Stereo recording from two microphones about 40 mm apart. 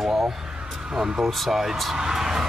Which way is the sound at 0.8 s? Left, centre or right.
Centre.